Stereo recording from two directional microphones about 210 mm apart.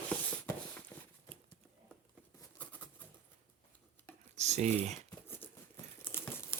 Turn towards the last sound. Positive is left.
turn(degrees=10)  # may be behind; listen again after turning